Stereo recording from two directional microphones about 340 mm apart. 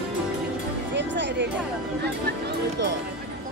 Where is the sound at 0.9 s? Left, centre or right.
Right.